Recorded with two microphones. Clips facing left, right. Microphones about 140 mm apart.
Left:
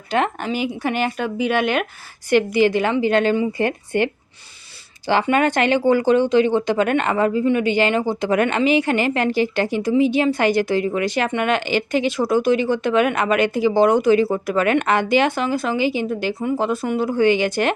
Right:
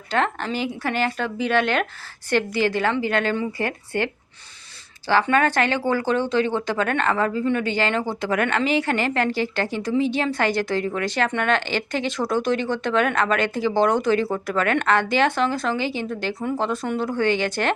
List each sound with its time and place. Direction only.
0.1 s speech: 15° left (ahead or behind)